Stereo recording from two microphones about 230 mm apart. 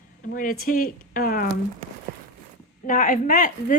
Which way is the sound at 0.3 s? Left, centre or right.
Left.